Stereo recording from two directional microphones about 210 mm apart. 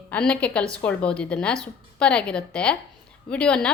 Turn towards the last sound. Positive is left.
turn(degrees=5)  # may be behind; listen again after turning